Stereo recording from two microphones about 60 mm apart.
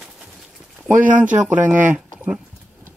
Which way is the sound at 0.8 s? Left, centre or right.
Right.